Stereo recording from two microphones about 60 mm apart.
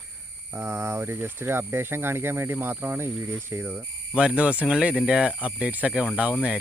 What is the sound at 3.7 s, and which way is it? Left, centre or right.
Speech, right.